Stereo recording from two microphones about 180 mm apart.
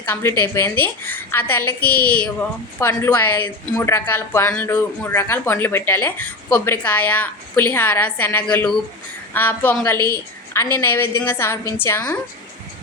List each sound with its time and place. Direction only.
0.1 s speech: 15° left (ahead or behind)